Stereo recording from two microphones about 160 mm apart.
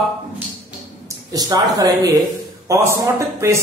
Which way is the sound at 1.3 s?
25° right (ahead or behind).